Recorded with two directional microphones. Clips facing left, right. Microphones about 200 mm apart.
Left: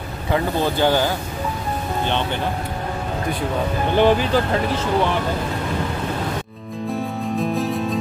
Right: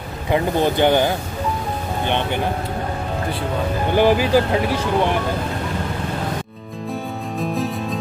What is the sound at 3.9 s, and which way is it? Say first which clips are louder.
Speech: right 1 dB; 10° right (ahead or behind).